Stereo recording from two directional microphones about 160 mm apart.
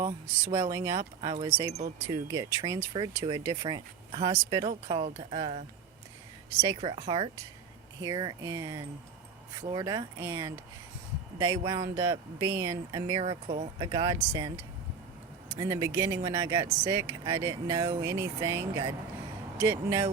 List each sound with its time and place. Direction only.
0.0 s speech: 20° right (ahead or behind)
4.9 s speech: 40° right (ahead or behind)
6.6 s speech: 20° right (ahead or behind)
13.2 s speech: 40° right (ahead or behind)
13.7 s speech: 25° right (ahead or behind)